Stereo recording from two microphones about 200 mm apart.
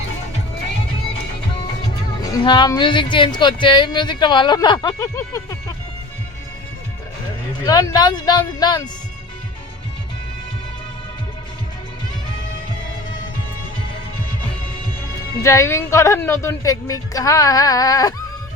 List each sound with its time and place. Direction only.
2.2 s speech: 20° left (ahead or behind)
7.6 s speech: 20° left (ahead or behind)
15.4 s a woman's voice: 15° left (ahead or behind)